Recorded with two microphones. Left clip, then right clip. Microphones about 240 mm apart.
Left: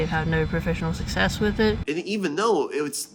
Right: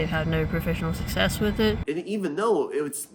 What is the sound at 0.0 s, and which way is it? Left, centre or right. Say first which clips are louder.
Speech: left 2 dB; left.